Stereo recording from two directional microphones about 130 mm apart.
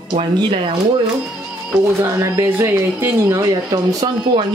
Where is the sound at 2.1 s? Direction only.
20° right (ahead or behind).